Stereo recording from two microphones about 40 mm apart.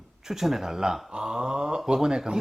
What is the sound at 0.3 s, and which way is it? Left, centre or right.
Speech, centre.